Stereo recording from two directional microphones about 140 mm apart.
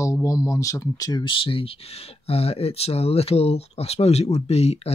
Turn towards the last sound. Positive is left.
turn(degrees=45)  # may be behind; listen again after turning